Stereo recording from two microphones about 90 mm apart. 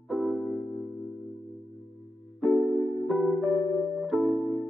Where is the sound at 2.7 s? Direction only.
Centre (ahead or behind).